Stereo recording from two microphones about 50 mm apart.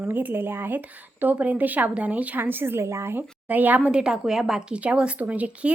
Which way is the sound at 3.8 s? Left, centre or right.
Centre.